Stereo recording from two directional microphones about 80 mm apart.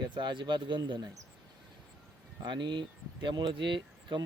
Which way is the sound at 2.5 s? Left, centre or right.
Right.